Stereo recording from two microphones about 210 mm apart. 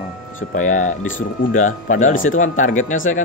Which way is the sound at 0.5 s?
35° left (ahead or behind).